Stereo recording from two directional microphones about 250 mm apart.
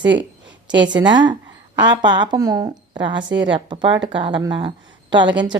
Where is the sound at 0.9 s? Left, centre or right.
Centre.